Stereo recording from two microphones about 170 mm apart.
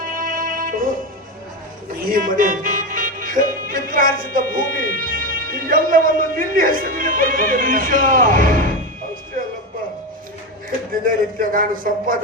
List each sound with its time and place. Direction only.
0.0 s music: 55° right (ahead or behind)
2.0 s music: 55° right (ahead or behind)
4.9 s a man's voice: 55° right (ahead or behind)
11.0 s a man's voice: 55° right (ahead or behind)